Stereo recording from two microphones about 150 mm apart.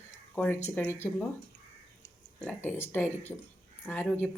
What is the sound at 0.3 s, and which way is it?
Speech, 10° left (ahead or behind).